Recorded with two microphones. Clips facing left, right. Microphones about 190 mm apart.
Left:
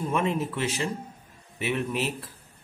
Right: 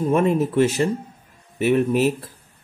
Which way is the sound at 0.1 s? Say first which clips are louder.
Right 9 dB; 45° right (ahead or behind).